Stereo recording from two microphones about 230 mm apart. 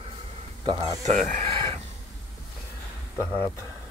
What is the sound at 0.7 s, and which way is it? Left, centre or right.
Speech, right.